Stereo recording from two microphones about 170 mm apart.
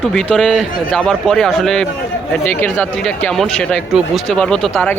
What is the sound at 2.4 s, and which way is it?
Speech, 15° left (ahead or behind).